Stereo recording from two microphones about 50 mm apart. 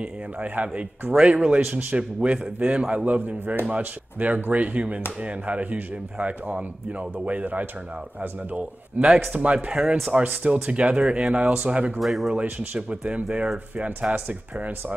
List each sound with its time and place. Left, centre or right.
0.0 s speech: right
1.1 s speech: centre
9.0 s speech: centre
9.3 s speech: right
12.0 s speech: centre
12.4 s speech: right